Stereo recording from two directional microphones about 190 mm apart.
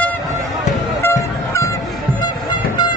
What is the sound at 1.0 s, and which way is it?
Honk, 15° left (ahead or behind).